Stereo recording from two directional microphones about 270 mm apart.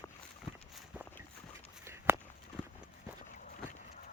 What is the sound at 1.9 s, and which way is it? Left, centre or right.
Walk, centre.